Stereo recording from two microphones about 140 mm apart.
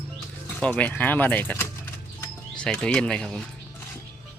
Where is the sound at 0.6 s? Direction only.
10° left (ahead or behind).